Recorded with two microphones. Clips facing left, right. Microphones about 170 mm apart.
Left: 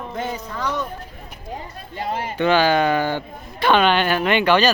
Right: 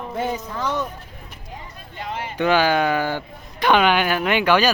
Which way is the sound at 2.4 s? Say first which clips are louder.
Left 1 dB; 10° right (ahead or behind).